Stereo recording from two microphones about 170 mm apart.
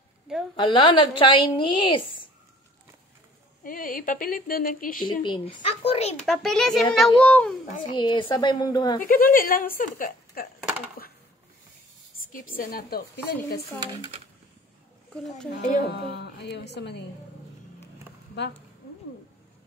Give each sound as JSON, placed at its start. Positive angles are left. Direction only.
{"t": 0.6, "sound": "a woman's voice", "side_deg": 30}
{"t": 3.6, "sound": "speech", "side_deg": 55}
{"t": 5.0, "sound": "speech", "side_deg": 25}
{"t": 6.2, "sound": "a child's voice", "side_deg": 0}
{"t": 7.8, "sound": "a woman's voice", "side_deg": 25}
{"t": 9.0, "sound": "a woman's voice", "side_deg": 55}
{"t": 12.3, "sound": "a woman's voice", "side_deg": 55}
{"t": 16.2, "sound": "a woman's voice", "side_deg": 90}